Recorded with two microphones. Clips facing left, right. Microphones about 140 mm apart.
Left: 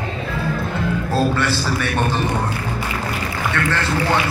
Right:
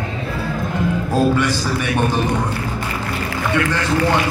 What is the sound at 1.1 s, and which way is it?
Speech, 15° right (ahead or behind).